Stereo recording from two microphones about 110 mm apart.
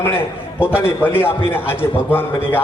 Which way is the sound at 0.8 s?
20° left (ahead or behind).